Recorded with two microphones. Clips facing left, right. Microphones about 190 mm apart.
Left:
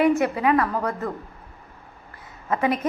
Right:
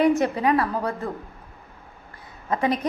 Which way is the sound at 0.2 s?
30° right (ahead or behind).